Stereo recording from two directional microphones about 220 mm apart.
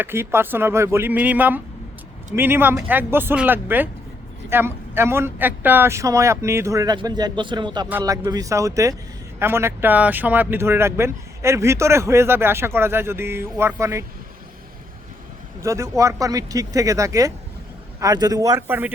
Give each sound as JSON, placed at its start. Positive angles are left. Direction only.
{"t": 0.0, "sound": "speech", "side_deg": -10}
{"t": 15.6, "sound": "speech", "side_deg": -15}